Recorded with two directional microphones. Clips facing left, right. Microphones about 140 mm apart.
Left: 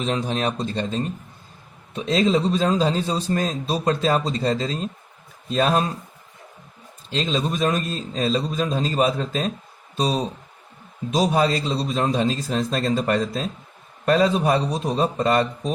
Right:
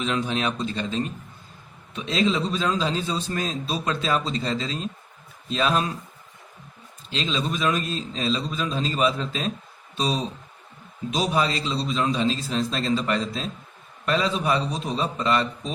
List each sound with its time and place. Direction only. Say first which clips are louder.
0.0 s a man's voice: left 2 dB; 40° left (ahead or behind)
7.1 s a man's voice: left 3 dB; 40° left (ahead or behind)
11.1 s a man's voice: left 4 dB; 45° left (ahead or behind)